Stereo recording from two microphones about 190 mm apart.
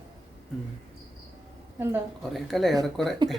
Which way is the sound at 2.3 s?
Centre (ahead or behind).